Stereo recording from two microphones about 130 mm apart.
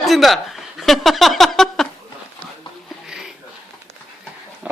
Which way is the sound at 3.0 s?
5° right (ahead or behind).